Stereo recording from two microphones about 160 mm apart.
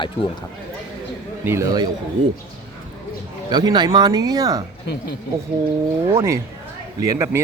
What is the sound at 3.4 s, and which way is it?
Speech, 25° right (ahead or behind).